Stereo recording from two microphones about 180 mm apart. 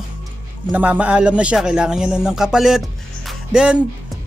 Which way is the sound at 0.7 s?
10° right (ahead or behind).